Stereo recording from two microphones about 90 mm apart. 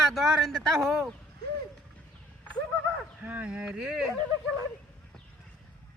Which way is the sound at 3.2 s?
15° right (ahead or behind).